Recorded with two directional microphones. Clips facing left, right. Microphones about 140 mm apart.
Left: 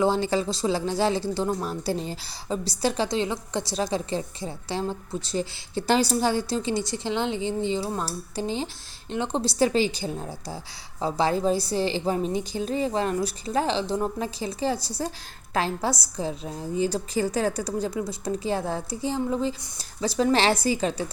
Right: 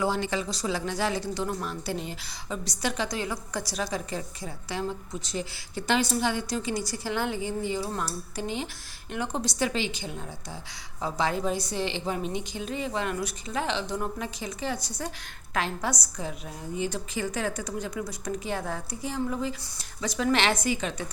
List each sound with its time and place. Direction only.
0.0 s a woman's voice: 30° left (ahead or behind)